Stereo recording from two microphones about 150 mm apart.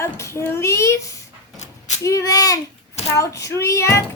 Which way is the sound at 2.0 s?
20° left (ahead or behind).